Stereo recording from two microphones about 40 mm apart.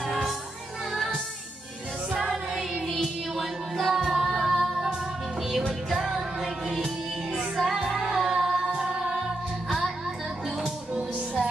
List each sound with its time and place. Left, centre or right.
0.0 s music: centre
2.1 s music: centre
3.0 s music: centre